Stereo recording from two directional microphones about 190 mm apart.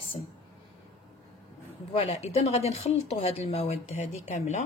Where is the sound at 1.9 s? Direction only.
35° left (ahead or behind).